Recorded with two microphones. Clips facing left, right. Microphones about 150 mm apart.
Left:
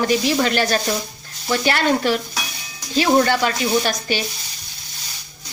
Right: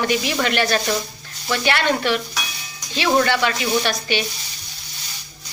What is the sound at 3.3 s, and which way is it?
Speech, 40° left (ahead or behind).